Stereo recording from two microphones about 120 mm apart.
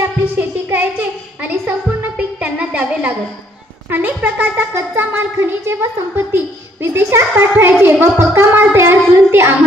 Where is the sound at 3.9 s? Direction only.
15° right (ahead or behind).